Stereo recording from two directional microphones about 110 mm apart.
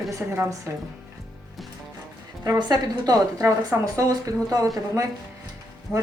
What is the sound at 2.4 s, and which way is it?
A woman's voice, 30° right (ahead or behind).